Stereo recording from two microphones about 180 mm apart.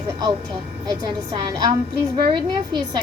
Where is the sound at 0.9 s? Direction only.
20° right (ahead or behind).